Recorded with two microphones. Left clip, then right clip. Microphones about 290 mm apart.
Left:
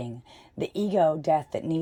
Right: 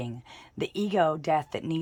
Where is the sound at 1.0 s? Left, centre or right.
Right.